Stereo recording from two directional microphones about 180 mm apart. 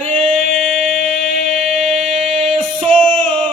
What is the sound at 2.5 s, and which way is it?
Music, 30° right (ahead or behind).